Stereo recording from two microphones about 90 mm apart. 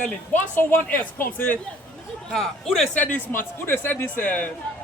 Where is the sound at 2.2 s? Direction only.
5° left (ahead or behind).